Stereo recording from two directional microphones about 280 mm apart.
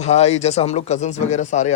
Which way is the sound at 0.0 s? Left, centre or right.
Left.